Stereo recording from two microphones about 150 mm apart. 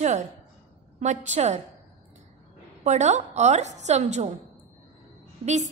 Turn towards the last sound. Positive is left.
turn(degrees=-50)  # may be behind; listen again after turning